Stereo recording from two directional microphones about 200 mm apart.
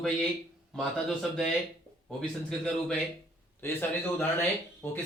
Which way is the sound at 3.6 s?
10° left (ahead or behind).